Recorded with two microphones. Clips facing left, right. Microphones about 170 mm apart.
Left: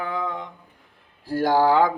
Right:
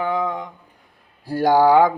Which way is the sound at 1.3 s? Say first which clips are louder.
Right 4 dB; 15° right (ahead or behind).